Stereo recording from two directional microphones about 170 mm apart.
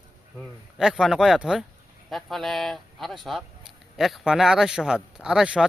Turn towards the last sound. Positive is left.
turn(degrees=-5)  # may be behind; listen again after turning